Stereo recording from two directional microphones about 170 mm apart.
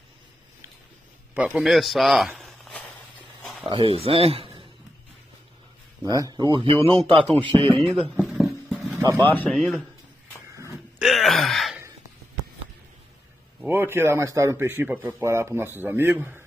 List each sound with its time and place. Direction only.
1.3 s speech: 10° right (ahead or behind)
3.6 s speech: 30° right (ahead or behind)
6.0 s a man's voice: 20° right (ahead or behind)
7.8 s a sound: centre (ahead or behind)
8.9 s vehicle: 20° right (ahead or behind)
9.2 s speech: 10° left (ahead or behind)
11.0 s gasp: centre (ahead or behind)
13.7 s speech: 15° right (ahead or behind)